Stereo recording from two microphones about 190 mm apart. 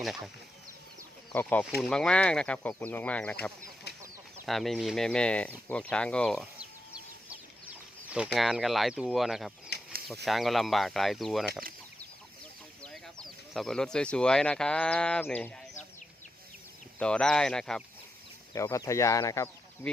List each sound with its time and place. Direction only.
1.3 s speech: 10° left (ahead or behind)
3.9 s chicken: 60° left (ahead or behind)
4.4 s speech: centre (ahead or behind)
7.3 s chicken: 5° right (ahead or behind)
9.7 s a sound: 60° left (ahead or behind)
10.2 s speech: centre (ahead or behind)
12.8 s speech: 5° left (ahead or behind)
17.0 s speech: 5° left (ahead or behind)
18.5 s speech: 15° left (ahead or behind)